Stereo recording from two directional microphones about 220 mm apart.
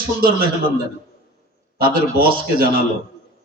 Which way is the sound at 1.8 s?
40° right (ahead or behind).